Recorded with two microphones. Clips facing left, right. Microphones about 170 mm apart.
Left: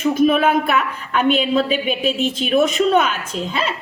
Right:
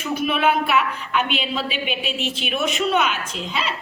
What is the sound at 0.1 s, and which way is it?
A woman's voice, 45° left (ahead or behind).